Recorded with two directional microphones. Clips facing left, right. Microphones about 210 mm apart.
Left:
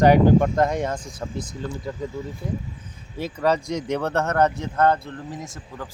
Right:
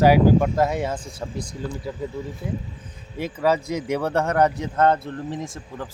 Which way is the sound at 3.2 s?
10° right (ahead or behind).